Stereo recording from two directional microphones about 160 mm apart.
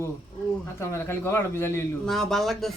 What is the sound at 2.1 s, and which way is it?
Speech, centre (ahead or behind).